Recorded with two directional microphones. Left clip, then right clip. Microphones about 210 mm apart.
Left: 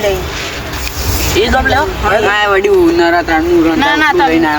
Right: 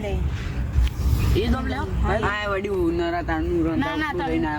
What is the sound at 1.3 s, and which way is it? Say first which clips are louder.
Speech: left 16 dB; 10° left (ahead or behind).